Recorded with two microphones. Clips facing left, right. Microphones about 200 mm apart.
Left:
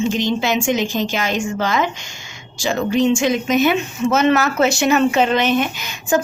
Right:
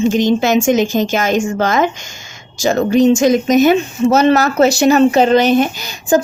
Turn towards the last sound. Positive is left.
turn(degrees=-35)  # may be behind; listen again after turning